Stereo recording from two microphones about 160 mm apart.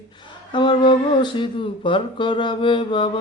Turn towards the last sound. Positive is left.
turn(degrees=30)  # may be behind; listen again after turning